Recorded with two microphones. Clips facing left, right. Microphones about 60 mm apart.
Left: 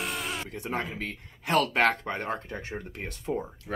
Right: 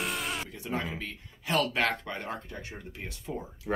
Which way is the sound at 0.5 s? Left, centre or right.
Left.